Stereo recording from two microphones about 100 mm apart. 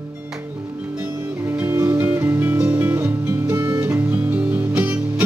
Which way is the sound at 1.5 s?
25° right (ahead or behind).